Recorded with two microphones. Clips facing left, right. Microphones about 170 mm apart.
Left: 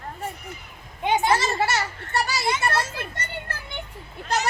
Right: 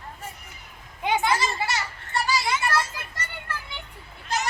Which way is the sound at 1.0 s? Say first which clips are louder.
Left 2 dB; 25° left (ahead or behind).